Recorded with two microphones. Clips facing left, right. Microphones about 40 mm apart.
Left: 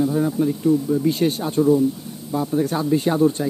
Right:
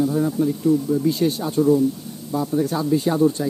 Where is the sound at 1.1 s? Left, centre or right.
Left.